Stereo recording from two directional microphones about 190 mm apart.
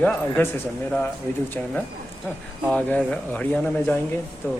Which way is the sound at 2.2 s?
5° left (ahead or behind).